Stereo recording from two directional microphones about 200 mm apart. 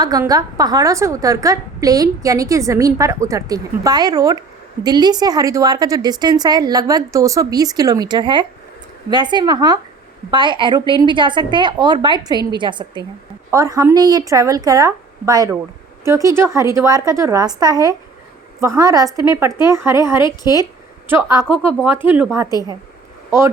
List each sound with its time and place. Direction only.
0.0 s a woman's voice: 20° right (ahead or behind)
20.2 s a woman's voice: 20° left (ahead or behind)
21.1 s a woman's voice: 15° right (ahead or behind)